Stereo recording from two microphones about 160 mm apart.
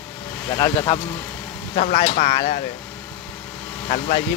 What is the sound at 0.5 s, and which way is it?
Speech, 30° left (ahead or behind).